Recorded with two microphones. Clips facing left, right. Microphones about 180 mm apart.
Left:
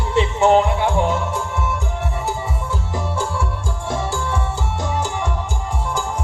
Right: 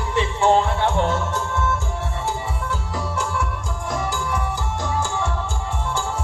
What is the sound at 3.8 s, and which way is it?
Music, 30° left (ahead or behind).